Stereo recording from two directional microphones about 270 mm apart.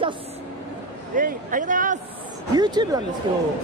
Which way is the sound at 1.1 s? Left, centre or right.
Right.